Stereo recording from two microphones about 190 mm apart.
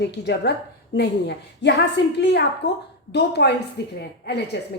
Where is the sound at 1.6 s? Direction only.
65° left (ahead or behind).